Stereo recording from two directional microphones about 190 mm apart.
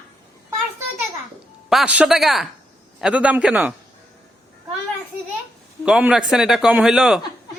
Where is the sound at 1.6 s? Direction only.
5° right (ahead or behind).